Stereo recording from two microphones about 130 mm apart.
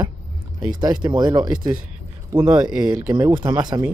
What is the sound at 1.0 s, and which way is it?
Speech, 30° right (ahead or behind).